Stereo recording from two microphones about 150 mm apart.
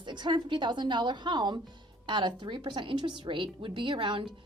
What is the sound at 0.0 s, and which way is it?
A woman's voice, 30° right (ahead or behind).